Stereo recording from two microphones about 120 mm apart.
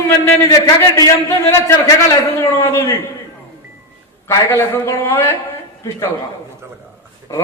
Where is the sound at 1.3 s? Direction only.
20° left (ahead or behind).